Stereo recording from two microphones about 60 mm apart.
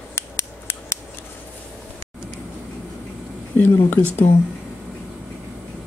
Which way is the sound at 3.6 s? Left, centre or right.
Left.